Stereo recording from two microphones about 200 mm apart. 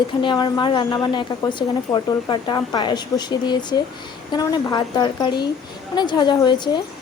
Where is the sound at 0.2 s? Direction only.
20° left (ahead or behind).